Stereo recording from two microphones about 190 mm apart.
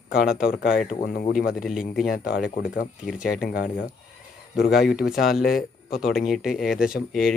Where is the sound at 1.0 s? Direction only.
45° left (ahead or behind).